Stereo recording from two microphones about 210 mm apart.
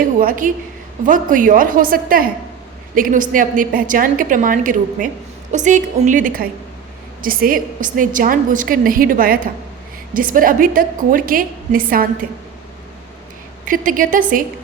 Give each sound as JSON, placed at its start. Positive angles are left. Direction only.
{"t": 0.0, "sound": "a woman's voice", "side_deg": -45}
{"t": 13.7, "sound": "a woman's voice", "side_deg": -40}